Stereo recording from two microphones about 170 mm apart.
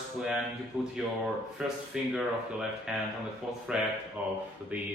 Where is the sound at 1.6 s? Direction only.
5° right (ahead or behind).